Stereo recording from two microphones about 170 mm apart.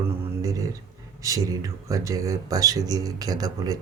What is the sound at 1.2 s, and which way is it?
Speech, 20° right (ahead or behind).